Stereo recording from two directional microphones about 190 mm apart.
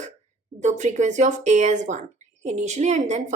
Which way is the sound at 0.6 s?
40° right (ahead or behind).